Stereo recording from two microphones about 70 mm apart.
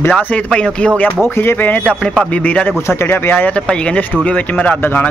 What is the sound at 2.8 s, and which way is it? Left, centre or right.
Speech, left.